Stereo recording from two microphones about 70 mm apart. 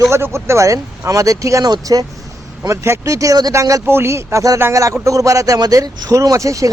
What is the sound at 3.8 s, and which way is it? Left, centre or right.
Speech, right.